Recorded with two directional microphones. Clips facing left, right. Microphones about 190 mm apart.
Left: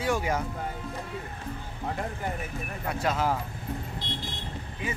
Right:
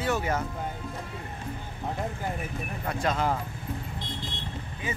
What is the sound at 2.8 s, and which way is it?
Speech, 5° left (ahead or behind).